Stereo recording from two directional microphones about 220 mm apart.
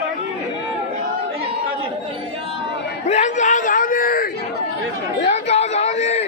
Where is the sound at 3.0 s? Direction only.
30° left (ahead or behind).